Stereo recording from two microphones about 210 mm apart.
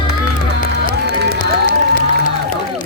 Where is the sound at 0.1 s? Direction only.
55° right (ahead or behind).